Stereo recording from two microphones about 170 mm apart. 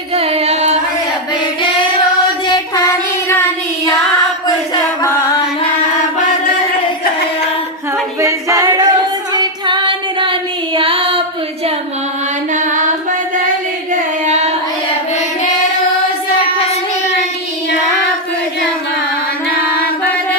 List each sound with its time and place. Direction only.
0.1 s music: 35° right (ahead or behind)
4.4 s a sound: 20° left (ahead or behind)
8.2 s a capella: 20° right (ahead or behind)
9.3 s female singing: 25° right (ahead or behind)
12.5 s music: 50° right (ahead or behind)
13.9 s singing: 45° right (ahead or behind)
16.4 s child singing: 35° left (ahead or behind)